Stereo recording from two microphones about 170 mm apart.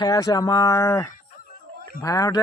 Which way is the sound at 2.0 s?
20° left (ahead or behind).